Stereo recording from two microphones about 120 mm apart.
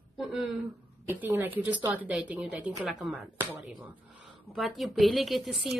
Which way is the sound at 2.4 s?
Centre (ahead or behind).